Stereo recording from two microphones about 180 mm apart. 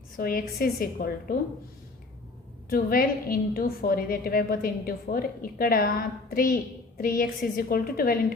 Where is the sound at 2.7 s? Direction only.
55° left (ahead or behind).